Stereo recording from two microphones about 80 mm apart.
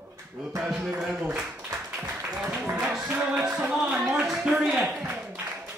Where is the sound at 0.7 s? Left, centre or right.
Centre.